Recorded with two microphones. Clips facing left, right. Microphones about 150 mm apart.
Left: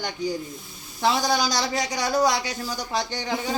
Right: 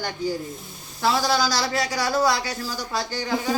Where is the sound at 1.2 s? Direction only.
20° left (ahead or behind).